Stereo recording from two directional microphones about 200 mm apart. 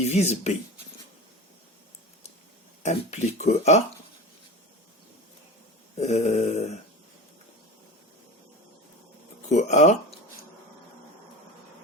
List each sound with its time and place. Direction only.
0.0 s speech: 35° left (ahead or behind)
2.8 s speech: 35° left (ahead or behind)
6.0 s speech: 35° left (ahead or behind)
9.5 s speech: 35° left (ahead or behind)